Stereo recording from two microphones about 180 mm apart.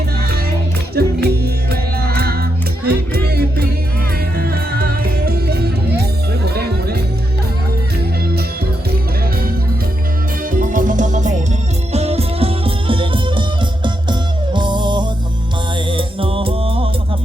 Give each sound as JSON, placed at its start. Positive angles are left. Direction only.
{"t": 0.9, "sound": "music", "side_deg": -60}
{"t": 10.5, "sound": "music", "side_deg": -50}